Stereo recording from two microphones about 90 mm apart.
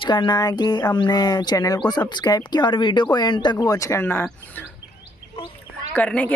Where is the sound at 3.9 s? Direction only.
25° left (ahead or behind).